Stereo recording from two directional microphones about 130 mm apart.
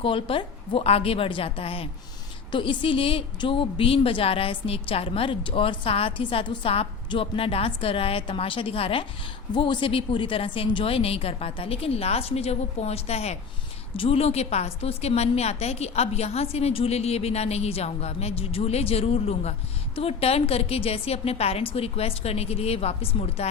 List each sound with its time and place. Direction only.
0.0 s a woman's voice: 45° left (ahead or behind)